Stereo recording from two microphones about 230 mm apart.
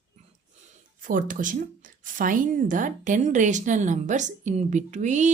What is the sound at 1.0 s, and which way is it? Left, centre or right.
Speech, right.